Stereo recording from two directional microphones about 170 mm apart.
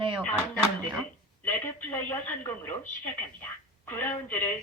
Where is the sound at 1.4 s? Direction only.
10° left (ahead or behind).